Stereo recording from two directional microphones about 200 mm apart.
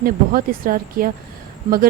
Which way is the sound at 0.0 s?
45° right (ahead or behind).